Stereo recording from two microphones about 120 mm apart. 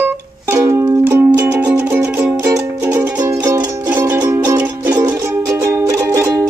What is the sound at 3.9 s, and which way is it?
Music, 15° right (ahead or behind).